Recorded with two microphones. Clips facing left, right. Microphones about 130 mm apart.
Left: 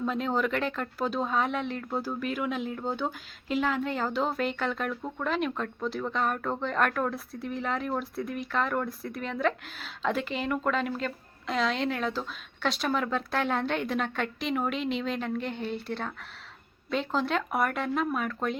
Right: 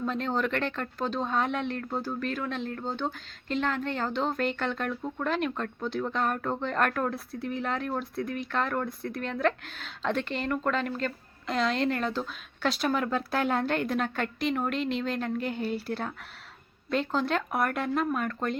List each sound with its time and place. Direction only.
0.0 s a woman's voice: 5° left (ahead or behind)